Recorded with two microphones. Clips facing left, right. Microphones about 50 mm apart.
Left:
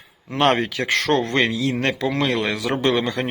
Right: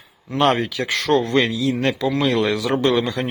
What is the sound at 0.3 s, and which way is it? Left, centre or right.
Speech, left.